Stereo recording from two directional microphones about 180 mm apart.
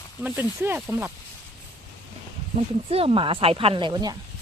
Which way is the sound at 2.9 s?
30° right (ahead or behind).